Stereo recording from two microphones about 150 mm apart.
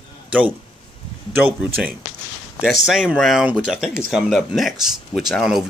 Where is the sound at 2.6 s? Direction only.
5° right (ahead or behind).